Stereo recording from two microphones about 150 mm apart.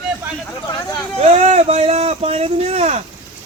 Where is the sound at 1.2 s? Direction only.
45° right (ahead or behind).